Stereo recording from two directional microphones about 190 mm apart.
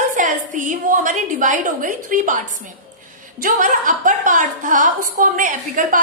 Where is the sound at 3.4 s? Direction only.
45° right (ahead or behind).